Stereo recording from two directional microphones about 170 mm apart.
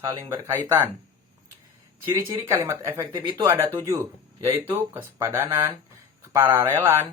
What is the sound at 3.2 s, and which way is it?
Speech, 25° right (ahead or behind).